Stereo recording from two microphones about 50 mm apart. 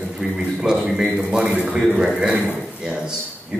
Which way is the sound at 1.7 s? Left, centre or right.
Centre.